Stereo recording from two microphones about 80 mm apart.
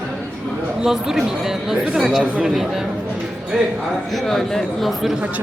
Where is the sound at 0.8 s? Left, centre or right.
Centre.